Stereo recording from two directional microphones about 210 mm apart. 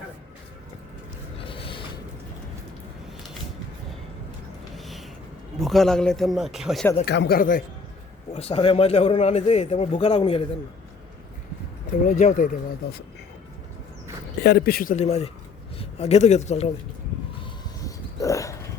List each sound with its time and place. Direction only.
1.4 s a sound: 25° left (ahead or behind)
4.7 s a sound: centre (ahead or behind)
5.5 s a man's voice: centre (ahead or behind)
7.0 s speech: 50° left (ahead or behind)
8.3 s a man's voice: 30° left (ahead or behind)
12.0 s a man's voice: 35° left (ahead or behind)
14.4 s a man's voice: 50° left (ahead or behind); by 16.7 s 30° left (ahead or behind)
17.7 s dog: 15° left (ahead or behind)